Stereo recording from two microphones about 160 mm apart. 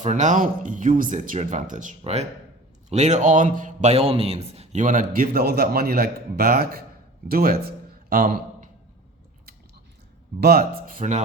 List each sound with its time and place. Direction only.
0.0 s a man's voice: 50° right (ahead or behind)
10.4 s speech: 65° right (ahead or behind)